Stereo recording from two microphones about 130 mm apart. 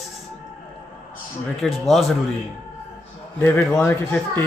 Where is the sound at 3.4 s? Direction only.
15° left (ahead or behind).